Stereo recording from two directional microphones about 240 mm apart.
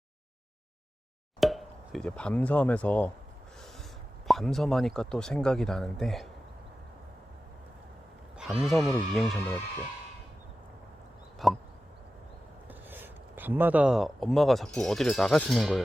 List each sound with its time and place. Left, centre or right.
1.4 s speech: centre
4.3 s speech: centre
8.4 s speech: centre
11.4 s speech: centre
12.6 s speech: centre